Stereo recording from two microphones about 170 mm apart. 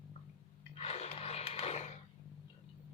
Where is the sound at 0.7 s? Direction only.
35° left (ahead or behind).